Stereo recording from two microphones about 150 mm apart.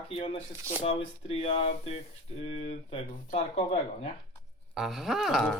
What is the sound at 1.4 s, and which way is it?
Speech, 40° left (ahead or behind).